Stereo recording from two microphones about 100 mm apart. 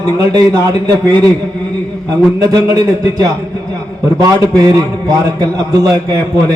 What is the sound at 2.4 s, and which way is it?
A man's voice, 35° right (ahead or behind).